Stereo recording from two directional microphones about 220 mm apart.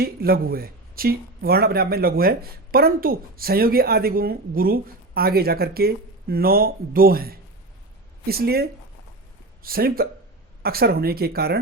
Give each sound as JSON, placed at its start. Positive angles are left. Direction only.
{"t": 0.0, "sound": "speech", "side_deg": -45}
{"t": 9.6, "sound": "speech", "side_deg": -40}